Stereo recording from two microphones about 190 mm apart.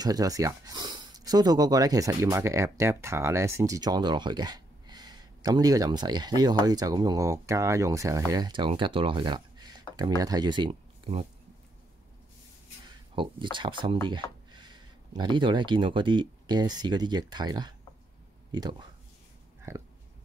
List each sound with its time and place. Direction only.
0.0 s speech: 20° right (ahead or behind)
13.1 s speech: 25° right (ahead or behind)